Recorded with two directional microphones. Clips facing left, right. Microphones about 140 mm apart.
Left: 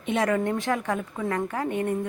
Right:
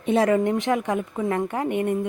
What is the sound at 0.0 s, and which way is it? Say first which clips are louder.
Speech: right 5 dB; 35° right (ahead or behind).